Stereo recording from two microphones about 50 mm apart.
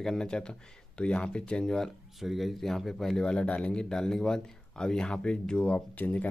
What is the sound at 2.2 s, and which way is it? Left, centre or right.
Speech, centre.